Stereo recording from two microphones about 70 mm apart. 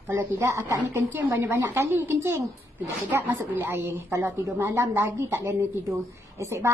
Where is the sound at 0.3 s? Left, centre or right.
Right.